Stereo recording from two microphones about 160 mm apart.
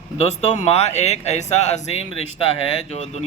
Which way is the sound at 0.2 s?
40° left (ahead or behind).